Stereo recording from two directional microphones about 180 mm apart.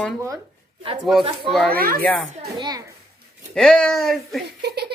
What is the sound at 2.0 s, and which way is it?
Speech, 5° left (ahead or behind).